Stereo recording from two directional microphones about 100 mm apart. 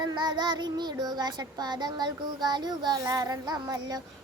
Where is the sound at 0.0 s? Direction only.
45° right (ahead or behind).